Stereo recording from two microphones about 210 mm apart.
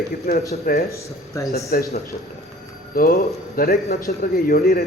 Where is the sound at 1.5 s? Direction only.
45° left (ahead or behind).